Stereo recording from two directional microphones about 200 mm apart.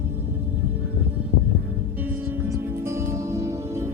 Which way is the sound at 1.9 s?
10° right (ahead or behind).